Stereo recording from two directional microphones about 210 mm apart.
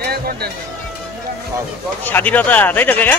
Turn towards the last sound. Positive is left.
turn(degrees=10)  # may be behind; listen again after turning